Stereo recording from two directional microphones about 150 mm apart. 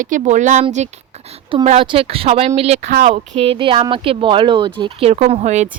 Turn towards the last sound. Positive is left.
turn(degrees=-50)  # may be behind; listen again after turning